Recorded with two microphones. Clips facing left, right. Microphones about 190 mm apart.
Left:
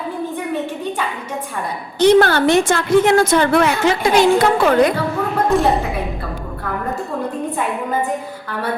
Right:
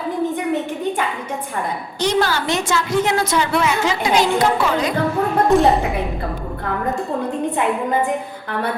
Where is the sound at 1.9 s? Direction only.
55° left (ahead or behind).